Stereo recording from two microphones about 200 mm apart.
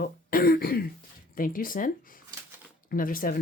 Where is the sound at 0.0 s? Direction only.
50° left (ahead or behind).